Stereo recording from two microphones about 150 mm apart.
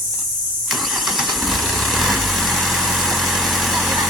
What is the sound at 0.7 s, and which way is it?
Vehicle, centre (ahead or behind).